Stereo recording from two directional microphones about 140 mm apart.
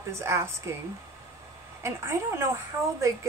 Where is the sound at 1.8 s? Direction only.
20° right (ahead or behind).